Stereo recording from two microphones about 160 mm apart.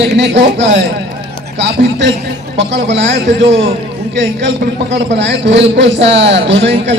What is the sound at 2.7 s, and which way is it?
Speech, 90° right.